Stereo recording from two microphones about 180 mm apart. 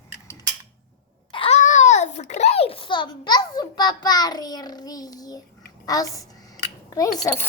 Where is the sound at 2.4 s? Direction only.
35° left (ahead or behind).